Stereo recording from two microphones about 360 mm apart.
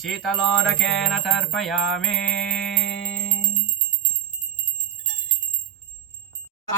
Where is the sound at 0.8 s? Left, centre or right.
Centre.